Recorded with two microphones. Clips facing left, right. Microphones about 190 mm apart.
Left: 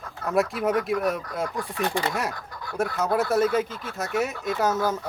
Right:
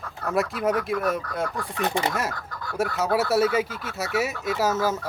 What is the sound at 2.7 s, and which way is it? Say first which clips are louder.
Speech: even; 5° right (ahead or behind).